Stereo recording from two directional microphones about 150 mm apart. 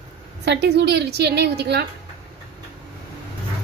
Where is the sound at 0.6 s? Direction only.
90° right.